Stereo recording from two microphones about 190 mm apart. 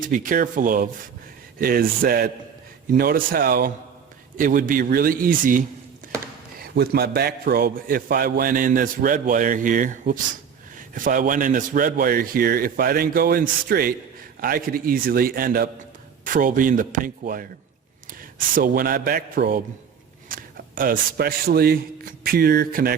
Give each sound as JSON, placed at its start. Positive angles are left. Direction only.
{"t": 0.0, "sound": "a man's voice", "side_deg": -45}
{"t": 6.0, "sound": "a sound", "side_deg": -45}
{"t": 6.6, "sound": "a man's voice", "side_deg": -55}